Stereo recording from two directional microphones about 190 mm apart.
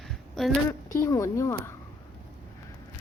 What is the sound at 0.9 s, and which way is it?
Speech, 15° left (ahead or behind).